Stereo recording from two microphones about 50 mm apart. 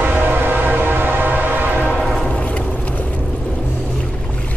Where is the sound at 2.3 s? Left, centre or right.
Left.